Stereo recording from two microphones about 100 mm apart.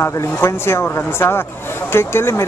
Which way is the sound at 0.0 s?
25° left (ahead or behind).